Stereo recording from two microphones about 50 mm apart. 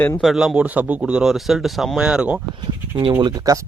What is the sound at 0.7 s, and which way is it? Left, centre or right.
Speech, right.